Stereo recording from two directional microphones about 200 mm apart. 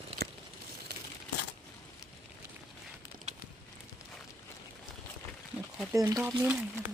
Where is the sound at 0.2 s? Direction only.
50° right (ahead or behind).